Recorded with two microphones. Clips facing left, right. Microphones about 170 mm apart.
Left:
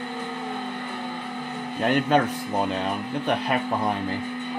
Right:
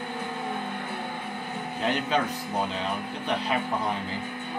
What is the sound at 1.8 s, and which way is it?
Speech, 55° left (ahead or behind).